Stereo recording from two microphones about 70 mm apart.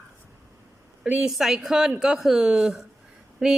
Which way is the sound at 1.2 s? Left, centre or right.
Centre.